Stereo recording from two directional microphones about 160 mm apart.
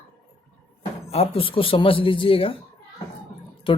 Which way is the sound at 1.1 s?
35° left (ahead or behind).